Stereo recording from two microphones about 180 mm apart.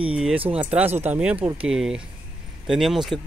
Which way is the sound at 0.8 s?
35° right (ahead or behind).